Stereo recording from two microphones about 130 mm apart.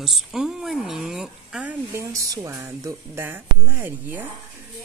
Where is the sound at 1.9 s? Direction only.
25° right (ahead or behind).